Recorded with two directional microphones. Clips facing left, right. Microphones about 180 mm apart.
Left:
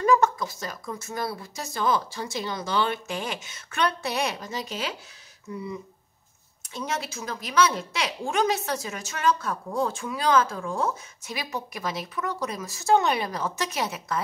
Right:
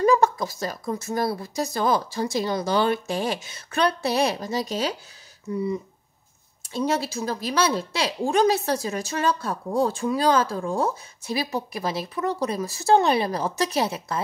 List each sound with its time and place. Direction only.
0.0 s a woman's voice: 35° right (ahead or behind)
6.7 s a woman's voice: 35° right (ahead or behind)